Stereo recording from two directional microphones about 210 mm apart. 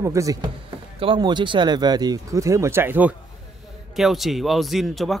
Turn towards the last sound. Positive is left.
turn(degrees=0)  # may be behind; listen again after turning